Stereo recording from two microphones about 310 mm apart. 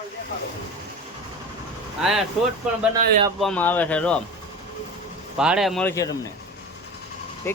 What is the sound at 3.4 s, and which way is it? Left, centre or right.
Speech, centre.